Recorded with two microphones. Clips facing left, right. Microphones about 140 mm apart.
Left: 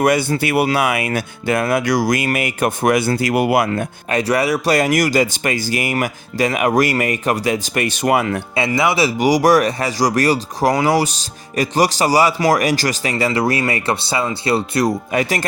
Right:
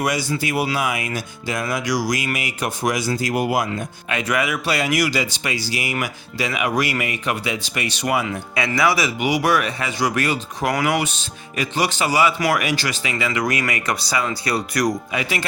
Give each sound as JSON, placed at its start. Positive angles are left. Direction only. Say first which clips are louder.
{"t": 0.0, "sound": "speech", "louder": "left 6 dB", "side_deg": 55}
{"t": 4.1, "sound": "speech", "louder": "left 5 dB", "side_deg": 35}
{"t": 8.5, "sound": "speech", "louder": "left 2 dB", "side_deg": 25}
{"t": 15.1, "sound": "speech", "louder": "left 6 dB", "side_deg": 45}